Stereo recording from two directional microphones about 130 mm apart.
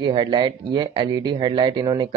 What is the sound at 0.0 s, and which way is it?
Speech, 35° right (ahead or behind).